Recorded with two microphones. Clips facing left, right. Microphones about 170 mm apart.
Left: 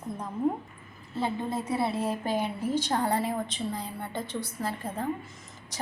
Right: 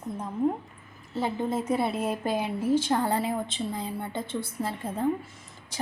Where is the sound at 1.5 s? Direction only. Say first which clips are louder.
Right 2 dB; 20° right (ahead or behind).